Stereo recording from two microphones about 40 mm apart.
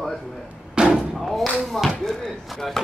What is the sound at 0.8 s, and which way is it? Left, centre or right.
Slam, right.